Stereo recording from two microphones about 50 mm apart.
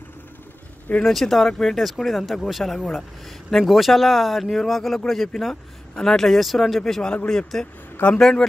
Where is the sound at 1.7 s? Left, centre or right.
Centre.